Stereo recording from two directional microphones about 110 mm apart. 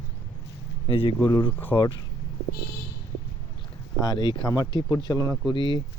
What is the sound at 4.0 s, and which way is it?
Speech, 40° left (ahead or behind).